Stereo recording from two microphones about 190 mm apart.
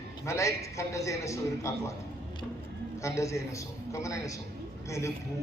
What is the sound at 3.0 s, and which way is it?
A man's voice, 15° left (ahead or behind).